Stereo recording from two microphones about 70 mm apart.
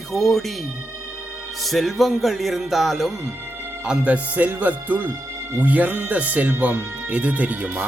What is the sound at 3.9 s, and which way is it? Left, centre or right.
Speech, centre.